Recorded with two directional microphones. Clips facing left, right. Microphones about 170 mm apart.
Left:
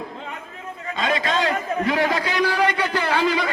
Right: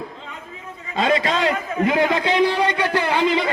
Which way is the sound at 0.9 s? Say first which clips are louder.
Right 3 dB; 30° right (ahead or behind).